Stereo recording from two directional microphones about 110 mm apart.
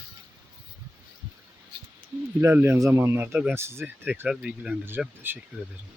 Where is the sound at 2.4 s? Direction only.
20° right (ahead or behind).